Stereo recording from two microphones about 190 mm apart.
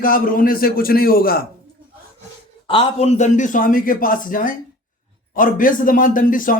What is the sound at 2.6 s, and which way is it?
A man's voice, 25° left (ahead or behind).